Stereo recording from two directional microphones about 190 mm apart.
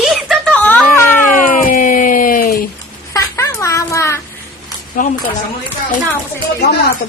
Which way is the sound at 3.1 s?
15° left (ahead or behind).